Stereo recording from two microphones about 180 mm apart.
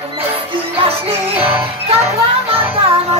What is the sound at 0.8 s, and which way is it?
Music, 30° right (ahead or behind).